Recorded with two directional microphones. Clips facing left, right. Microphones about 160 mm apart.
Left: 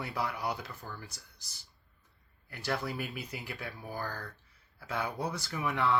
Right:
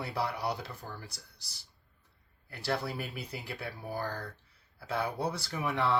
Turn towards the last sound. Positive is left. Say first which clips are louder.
# even
turn(degrees=-30)  # may be behind; listen again after turning